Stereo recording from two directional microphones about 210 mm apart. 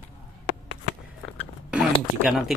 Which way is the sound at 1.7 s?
5° right (ahead or behind).